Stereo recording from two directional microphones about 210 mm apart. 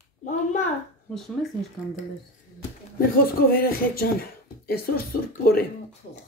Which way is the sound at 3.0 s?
45° left (ahead or behind).